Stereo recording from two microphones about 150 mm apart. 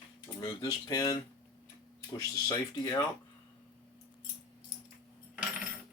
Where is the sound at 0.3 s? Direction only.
25° left (ahead or behind).